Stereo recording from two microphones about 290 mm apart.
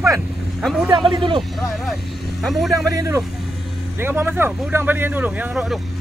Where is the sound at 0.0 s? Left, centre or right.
Centre.